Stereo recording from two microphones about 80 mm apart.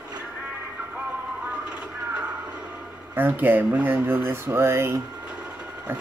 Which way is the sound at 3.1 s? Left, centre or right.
Right.